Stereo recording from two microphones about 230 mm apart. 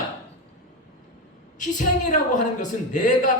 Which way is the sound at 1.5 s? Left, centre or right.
Left.